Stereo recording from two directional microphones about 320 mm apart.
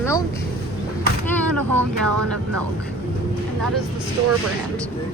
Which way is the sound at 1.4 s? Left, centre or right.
Centre.